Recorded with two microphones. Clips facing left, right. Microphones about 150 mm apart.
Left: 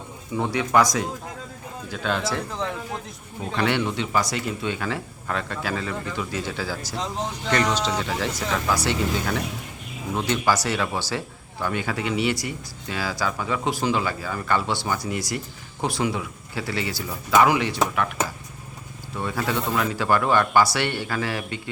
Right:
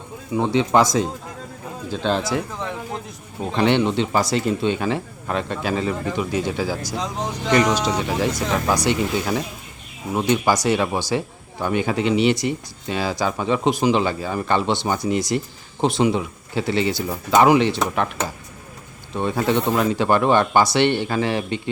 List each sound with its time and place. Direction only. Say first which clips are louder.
0.3 s speech: right 3 dB; 25° right (ahead or behind)
2.2 s speech: right 2 dB; 5° right (ahead or behind)
3.5 s speech: right 6 dB; 25° right (ahead or behind)
19.1 s speech: right 6 dB; 25° right (ahead or behind)